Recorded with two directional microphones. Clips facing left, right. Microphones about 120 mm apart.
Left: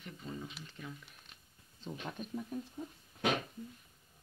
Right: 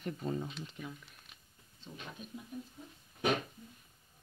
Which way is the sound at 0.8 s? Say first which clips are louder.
Right 2 dB; 5° right (ahead or behind).